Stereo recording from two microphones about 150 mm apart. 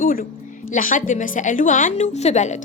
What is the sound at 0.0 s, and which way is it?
Music, 75° left (ahead or behind).